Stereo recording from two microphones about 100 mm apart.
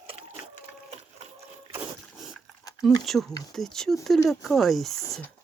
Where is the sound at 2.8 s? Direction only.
Centre (ahead or behind).